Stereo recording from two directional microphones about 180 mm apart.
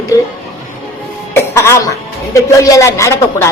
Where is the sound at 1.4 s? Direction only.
15° left (ahead or behind).